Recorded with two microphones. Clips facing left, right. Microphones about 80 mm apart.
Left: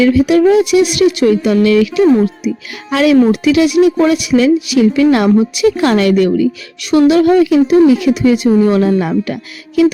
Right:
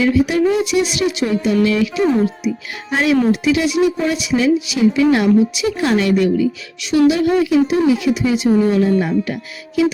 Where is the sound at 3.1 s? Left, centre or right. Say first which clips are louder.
Left 5 dB; left.